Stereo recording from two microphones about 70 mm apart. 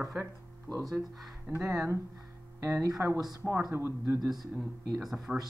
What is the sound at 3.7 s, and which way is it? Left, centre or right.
Speech, right.